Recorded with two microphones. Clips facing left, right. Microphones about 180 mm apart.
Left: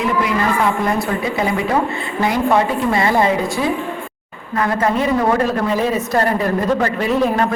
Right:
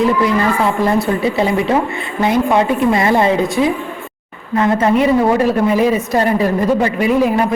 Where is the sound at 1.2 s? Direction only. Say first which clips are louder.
Right 4 dB; 30° right (ahead or behind).